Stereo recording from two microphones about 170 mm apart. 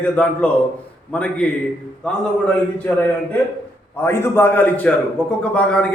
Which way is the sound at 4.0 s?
15° left (ahead or behind).